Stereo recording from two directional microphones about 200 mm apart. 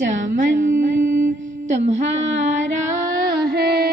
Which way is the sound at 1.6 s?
35° right (ahead or behind).